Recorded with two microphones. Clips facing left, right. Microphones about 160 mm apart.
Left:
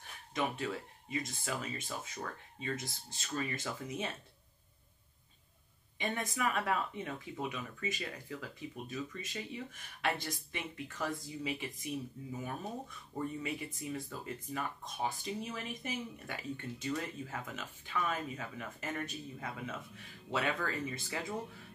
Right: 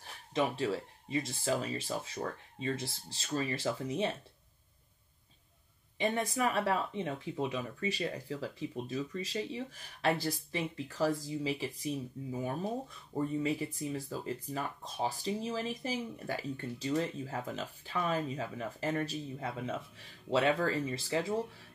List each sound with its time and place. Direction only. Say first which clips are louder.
0.3 s speech: right 5 dB; 30° right (ahead or behind)
5.9 s speech: right 5 dB; 30° right (ahead or behind)